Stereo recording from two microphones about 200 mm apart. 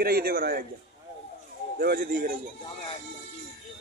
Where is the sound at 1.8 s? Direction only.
50° right (ahead or behind).